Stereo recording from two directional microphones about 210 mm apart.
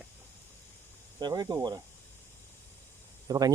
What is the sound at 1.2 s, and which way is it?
Speech, 20° right (ahead or behind).